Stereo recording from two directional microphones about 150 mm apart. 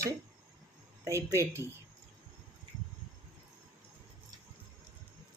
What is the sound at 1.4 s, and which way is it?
Speech, 20° right (ahead or behind).